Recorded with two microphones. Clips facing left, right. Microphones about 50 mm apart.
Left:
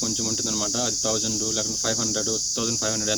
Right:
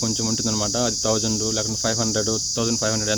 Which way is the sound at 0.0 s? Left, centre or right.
Right.